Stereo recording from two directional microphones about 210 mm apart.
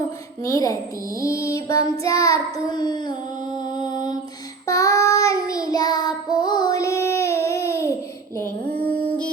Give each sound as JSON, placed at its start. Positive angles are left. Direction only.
{"t": 0.4, "sound": "mantra", "side_deg": 15}
{"t": 2.0, "sound": "child singing", "side_deg": 15}
{"t": 3.8, "sound": "mantra", "side_deg": 20}
{"t": 4.6, "sound": "child singing", "side_deg": 15}
{"t": 8.6, "sound": "a sound", "side_deg": -45}